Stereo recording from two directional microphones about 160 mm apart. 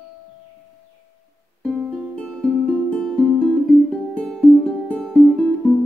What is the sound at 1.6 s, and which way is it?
Music, 5° left (ahead or behind).